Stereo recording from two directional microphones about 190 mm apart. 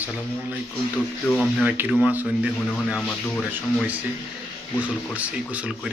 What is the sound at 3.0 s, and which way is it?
Speech, 5° left (ahead or behind).